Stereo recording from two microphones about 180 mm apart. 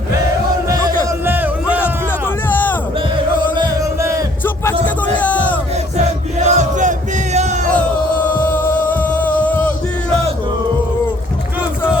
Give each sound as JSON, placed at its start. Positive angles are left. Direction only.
{"t": 0.7, "sound": "music", "side_deg": -15}
{"t": 2.5, "sound": "a sound", "side_deg": 10}
{"t": 3.5, "sound": "music", "side_deg": -20}
{"t": 5.1, "sound": "a sound", "side_deg": 10}
{"t": 6.4, "sound": "battle cry", "side_deg": -40}
{"t": 7.3, "sound": "music", "side_deg": -40}
{"t": 8.4, "sound": "music", "side_deg": 10}